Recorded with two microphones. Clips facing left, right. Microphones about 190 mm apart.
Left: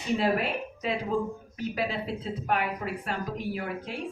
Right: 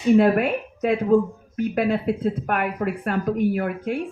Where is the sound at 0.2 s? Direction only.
50° right (ahead or behind).